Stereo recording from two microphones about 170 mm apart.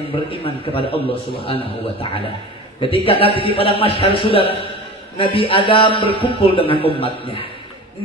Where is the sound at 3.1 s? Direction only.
35° left (ahead or behind).